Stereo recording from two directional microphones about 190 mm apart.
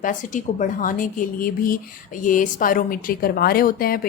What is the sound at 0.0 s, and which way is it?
A woman's voice, 40° left (ahead or behind).